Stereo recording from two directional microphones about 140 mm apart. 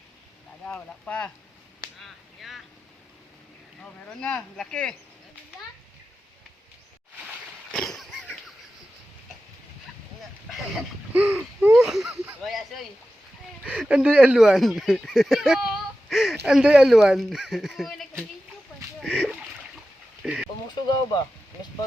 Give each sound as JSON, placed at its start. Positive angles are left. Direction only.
{"t": 0.6, "sound": "speech", "side_deg": 10}
{"t": 2.0, "sound": "whip", "side_deg": 0}
{"t": 4.0, "sound": "speech", "side_deg": 10}
{"t": 7.7, "sound": "a sound", "side_deg": 5}
{"t": 11.1, "sound": "a sound", "side_deg": -10}
{"t": 12.4, "sound": "speech", "side_deg": 0}
{"t": 19.0, "sound": "splash", "side_deg": -5}
{"t": 20.2, "sound": "a sound", "side_deg": -10}
{"t": 20.8, "sound": "speech", "side_deg": 30}